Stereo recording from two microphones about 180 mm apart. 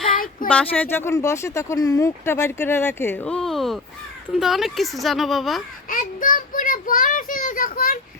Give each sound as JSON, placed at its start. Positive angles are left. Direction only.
{"t": 0.4, "sound": "speech", "side_deg": 10}
{"t": 5.9, "sound": "child singing", "side_deg": 50}